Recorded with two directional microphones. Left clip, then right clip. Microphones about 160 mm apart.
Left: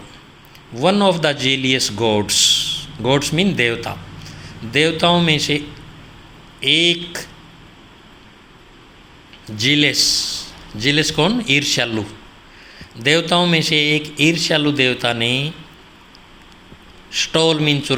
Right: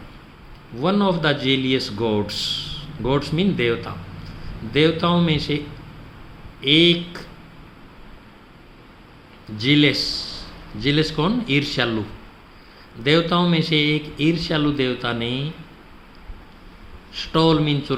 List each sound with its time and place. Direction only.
0.8 s speech: 25° left (ahead or behind)
9.6 s speech: 25° left (ahead or behind)
13.0 s speech: 25° left (ahead or behind)
17.2 s speech: 25° left (ahead or behind)